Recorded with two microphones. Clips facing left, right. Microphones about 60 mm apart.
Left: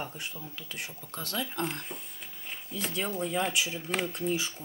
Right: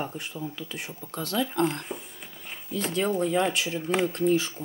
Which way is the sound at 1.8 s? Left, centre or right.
Centre.